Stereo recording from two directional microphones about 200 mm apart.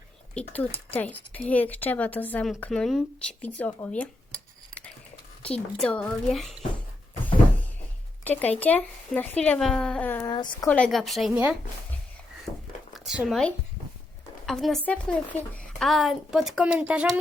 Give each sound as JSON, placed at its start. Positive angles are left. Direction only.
{"t": 0.3, "sound": "speech", "side_deg": 5}
{"t": 5.4, "sound": "a woman's voice", "side_deg": 5}
{"t": 7.3, "sound": "door", "side_deg": 10}
{"t": 8.2, "sound": "speech", "side_deg": 10}
{"t": 10.3, "sound": "speech", "side_deg": 20}
{"t": 10.7, "sound": "a woman's voice", "side_deg": 5}
{"t": 13.1, "sound": "a woman's voice", "side_deg": 0}